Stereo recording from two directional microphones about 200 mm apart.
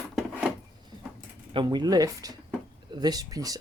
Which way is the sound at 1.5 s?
20° right (ahead or behind).